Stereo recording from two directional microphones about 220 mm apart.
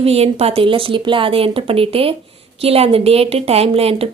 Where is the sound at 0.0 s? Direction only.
25° right (ahead or behind).